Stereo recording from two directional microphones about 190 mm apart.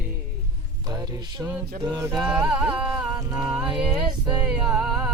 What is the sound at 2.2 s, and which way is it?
Music, 5° right (ahead or behind).